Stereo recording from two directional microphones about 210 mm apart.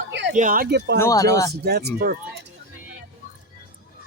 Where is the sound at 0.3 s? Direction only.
40° right (ahead or behind).